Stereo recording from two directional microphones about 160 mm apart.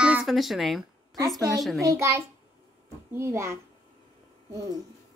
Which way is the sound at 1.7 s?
20° right (ahead or behind).